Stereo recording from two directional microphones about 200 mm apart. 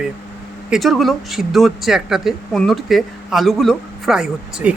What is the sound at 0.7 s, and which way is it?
Speech, centre (ahead or behind).